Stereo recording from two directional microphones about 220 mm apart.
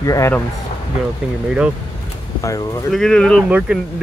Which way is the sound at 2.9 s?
5° left (ahead or behind).